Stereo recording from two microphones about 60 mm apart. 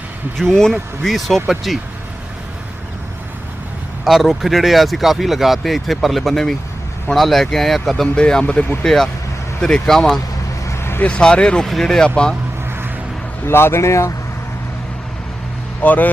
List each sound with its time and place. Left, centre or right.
0.3 s speech: centre
4.0 s speech: centre
8.1 s speech: centre
10.7 s vehicle: left
11.0 s speech: centre
13.4 s speech: left
15.8 s speech: left